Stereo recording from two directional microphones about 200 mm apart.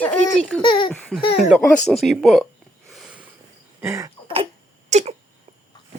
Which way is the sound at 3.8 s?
15° right (ahead or behind).